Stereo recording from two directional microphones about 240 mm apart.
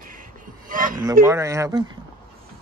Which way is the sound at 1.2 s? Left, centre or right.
Centre.